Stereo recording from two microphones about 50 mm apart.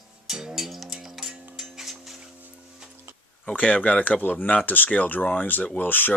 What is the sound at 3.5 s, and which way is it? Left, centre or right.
Speech, left.